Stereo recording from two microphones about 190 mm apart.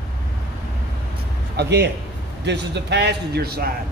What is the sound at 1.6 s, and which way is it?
Speech, 60° right (ahead or behind).